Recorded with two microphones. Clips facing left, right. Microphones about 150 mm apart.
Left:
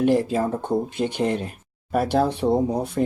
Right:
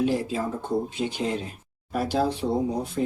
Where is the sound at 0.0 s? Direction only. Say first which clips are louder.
Left 5 dB; 55° left (ahead or behind).